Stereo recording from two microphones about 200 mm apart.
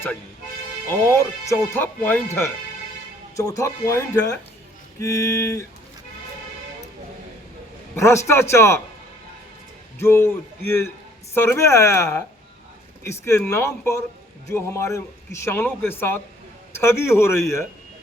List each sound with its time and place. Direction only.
1.1 s a man's voice: 15° left (ahead or behind)
7.9 s a man's voice: 15° left (ahead or behind)
10.0 s a man's voice: 10° left (ahead or behind)
11.3 s a man's voice: 10° left (ahead or behind)